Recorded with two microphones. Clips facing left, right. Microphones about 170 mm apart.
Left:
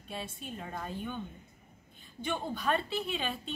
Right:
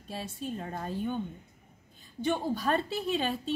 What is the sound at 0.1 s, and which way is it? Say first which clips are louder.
A woman's voice: right 4 dB; 35° right (ahead or behind).